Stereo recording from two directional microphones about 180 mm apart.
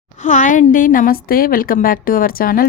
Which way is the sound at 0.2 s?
40° left (ahead or behind).